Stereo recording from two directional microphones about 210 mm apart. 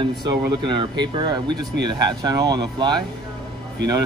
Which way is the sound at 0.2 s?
20° right (ahead or behind).